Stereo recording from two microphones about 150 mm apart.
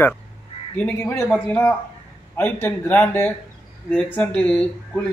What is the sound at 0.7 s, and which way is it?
Speech, 15° left (ahead or behind).